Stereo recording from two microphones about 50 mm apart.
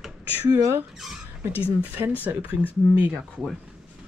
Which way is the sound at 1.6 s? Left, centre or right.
Right.